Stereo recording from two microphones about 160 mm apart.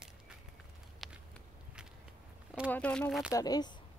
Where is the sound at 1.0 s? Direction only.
Centre (ahead or behind).